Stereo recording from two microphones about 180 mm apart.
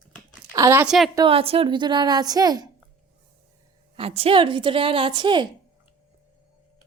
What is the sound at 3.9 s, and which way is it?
A woman's voice, 35° right (ahead or behind).